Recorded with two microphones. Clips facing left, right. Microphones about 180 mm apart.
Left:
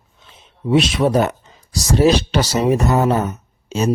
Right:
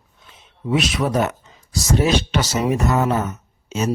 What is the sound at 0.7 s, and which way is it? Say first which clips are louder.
Speech: left 5 dB; 30° left (ahead or behind).